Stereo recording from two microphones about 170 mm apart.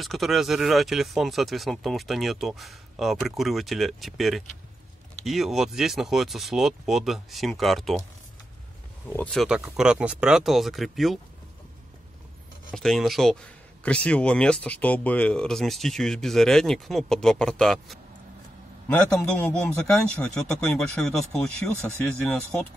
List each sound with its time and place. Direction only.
0.0 s speech: centre (ahead or behind)
9.0 s speech: 10° left (ahead or behind)
12.7 s a man's voice: centre (ahead or behind)